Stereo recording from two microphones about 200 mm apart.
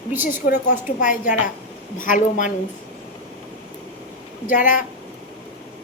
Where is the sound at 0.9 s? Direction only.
40° left (ahead or behind).